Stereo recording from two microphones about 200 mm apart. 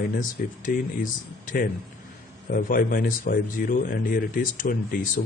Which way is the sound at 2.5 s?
45° left (ahead or behind).